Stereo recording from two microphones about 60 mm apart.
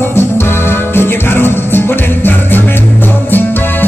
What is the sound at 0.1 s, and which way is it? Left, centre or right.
Music, left.